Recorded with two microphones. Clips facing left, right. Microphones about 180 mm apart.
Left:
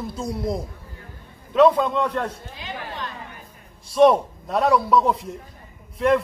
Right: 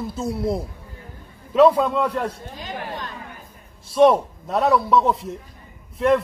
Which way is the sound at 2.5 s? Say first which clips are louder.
Right 2 dB; 45° right (ahead or behind).